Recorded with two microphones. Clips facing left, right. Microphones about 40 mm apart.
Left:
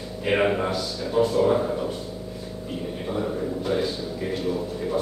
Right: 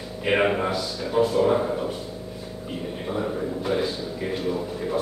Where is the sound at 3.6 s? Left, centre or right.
Centre.